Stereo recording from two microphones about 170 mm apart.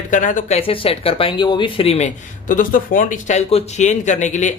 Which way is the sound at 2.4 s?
55° left (ahead or behind).